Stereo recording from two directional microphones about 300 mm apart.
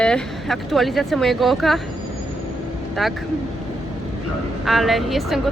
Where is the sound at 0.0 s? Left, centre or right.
Centre.